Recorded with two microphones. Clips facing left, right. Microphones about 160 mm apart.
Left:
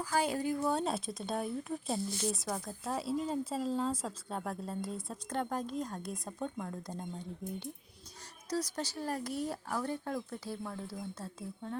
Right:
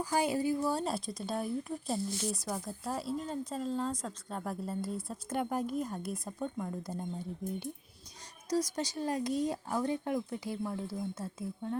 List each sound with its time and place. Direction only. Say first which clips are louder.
0.0 s speech: right 2 dB; 15° right (ahead or behind)